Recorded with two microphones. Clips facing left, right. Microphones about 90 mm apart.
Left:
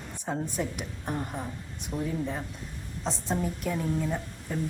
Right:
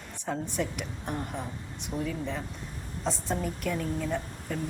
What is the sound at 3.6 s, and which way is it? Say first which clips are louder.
Speech: right 1 dB; 15° left (ahead or behind).